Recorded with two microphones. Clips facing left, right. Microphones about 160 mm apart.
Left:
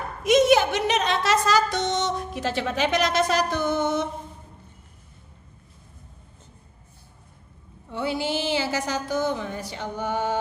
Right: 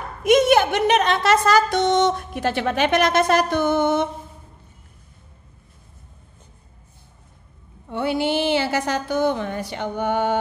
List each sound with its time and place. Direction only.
0.2 s a woman's voice: 55° right (ahead or behind)
7.9 s a woman's voice: 60° right (ahead or behind)